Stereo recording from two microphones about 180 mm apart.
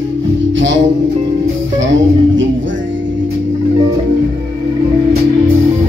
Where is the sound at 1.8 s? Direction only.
90° right.